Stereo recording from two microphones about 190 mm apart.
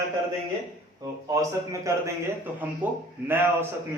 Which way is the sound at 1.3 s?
15° right (ahead or behind).